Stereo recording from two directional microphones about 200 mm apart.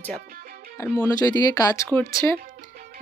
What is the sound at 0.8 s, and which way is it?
Speech, 15° left (ahead or behind).